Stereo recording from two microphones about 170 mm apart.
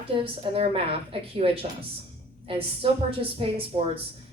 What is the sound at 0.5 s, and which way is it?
A woman's voice, 35° right (ahead or behind).